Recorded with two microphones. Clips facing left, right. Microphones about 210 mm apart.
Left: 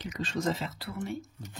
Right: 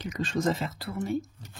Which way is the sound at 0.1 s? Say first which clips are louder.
Right 4 dB; 50° right (ahead or behind).